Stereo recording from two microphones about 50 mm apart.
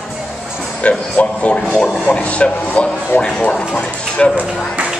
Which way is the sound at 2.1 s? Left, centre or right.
Left.